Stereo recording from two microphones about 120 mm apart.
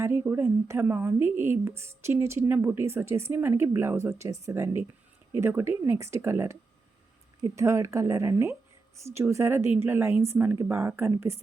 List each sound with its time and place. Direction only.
0.0 s a woman's voice: 25° right (ahead or behind)